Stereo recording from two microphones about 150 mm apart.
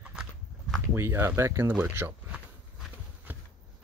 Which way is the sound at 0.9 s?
15° right (ahead or behind).